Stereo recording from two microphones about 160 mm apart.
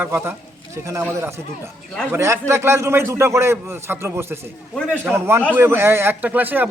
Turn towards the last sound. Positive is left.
turn(degrees=-10)  # may be behind; listen again after turning